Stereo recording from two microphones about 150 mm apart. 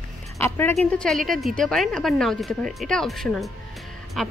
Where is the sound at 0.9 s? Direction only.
5° left (ahead or behind).